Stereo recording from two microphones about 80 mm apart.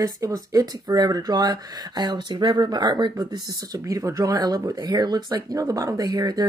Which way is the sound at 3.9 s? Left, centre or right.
Right.